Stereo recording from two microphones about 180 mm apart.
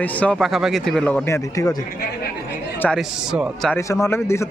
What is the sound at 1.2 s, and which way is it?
Speech, 15° left (ahead or behind).